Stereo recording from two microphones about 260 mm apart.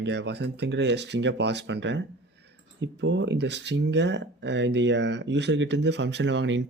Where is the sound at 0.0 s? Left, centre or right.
Right.